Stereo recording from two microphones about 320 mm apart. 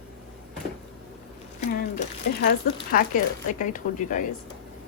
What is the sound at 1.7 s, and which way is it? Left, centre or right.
Speech, left.